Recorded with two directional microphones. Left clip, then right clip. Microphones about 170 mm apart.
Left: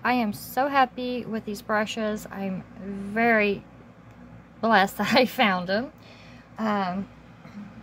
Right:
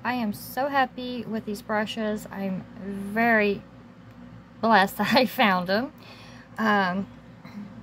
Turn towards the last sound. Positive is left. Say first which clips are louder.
# right 4 dB
turn(degrees=-20)  # may be behind; listen again after turning